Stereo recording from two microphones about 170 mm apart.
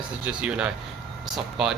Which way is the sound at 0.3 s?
5° right (ahead or behind).